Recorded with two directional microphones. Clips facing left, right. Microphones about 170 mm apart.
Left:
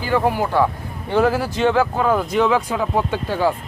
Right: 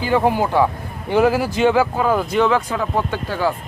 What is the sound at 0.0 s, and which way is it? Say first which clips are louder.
Speech: right 2 dB; 20° right (ahead or behind).